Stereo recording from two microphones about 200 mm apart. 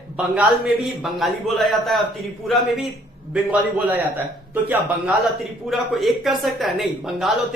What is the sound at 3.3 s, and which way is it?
A man's voice, 5° right (ahead or behind).